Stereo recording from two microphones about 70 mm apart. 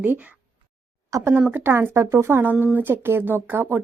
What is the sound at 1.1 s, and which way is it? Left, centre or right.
A woman's voice, right.